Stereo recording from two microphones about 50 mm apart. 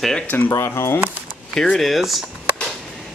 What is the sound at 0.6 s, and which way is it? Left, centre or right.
Speech, left.